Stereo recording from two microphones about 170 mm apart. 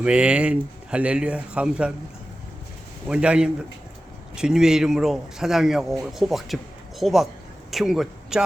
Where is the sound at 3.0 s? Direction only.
5° right (ahead or behind).